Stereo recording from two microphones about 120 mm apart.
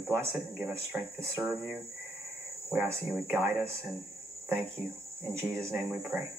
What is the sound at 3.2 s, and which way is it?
Speech, 15° right (ahead or behind).